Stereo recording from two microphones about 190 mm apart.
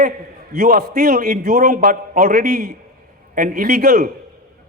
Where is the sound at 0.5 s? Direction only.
45° right (ahead or behind).